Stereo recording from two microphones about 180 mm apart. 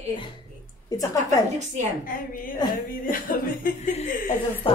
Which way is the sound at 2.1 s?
50° left (ahead or behind).